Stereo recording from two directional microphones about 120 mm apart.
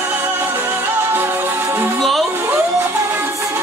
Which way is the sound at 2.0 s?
Centre (ahead or behind).